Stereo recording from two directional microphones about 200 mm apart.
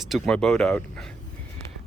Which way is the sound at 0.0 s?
Centre (ahead or behind).